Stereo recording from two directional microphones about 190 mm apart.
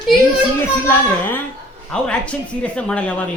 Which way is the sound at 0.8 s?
10° left (ahead or behind).